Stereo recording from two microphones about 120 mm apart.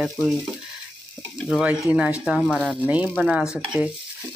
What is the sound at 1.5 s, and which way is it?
Sizzle, 5° right (ahead or behind).